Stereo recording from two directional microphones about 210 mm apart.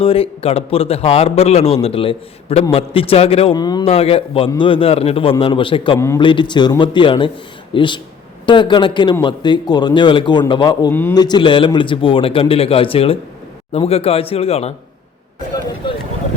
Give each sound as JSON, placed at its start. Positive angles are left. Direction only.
{"t": 0.0, "sound": "a man's voice", "side_deg": 25}
{"t": 15.8, "sound": "vehicle", "side_deg": 25}